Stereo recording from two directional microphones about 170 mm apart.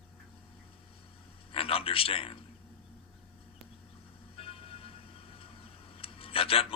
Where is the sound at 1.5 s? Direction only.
35° left (ahead or behind).